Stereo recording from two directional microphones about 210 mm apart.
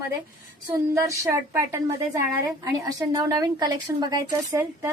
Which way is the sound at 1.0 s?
15° right (ahead or behind).